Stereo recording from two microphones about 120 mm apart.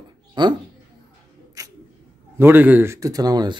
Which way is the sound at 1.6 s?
30° right (ahead or behind).